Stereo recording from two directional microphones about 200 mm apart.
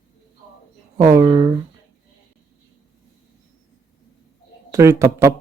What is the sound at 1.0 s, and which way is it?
Speech, 15° right (ahead or behind).